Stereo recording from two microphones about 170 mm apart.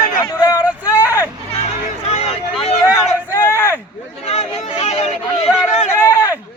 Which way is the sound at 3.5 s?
15° right (ahead or behind).